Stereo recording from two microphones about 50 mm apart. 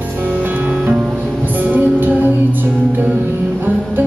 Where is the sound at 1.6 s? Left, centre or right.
Right.